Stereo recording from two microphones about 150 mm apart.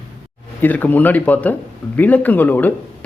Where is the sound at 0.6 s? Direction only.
10° left (ahead or behind).